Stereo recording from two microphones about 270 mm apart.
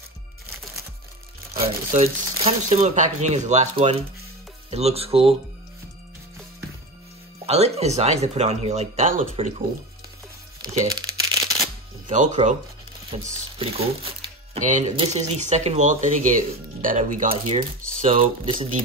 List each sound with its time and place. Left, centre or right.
1.9 s speech: right
7.4 s speech: right
10.9 s crumpling: centre
12.1 s speech: right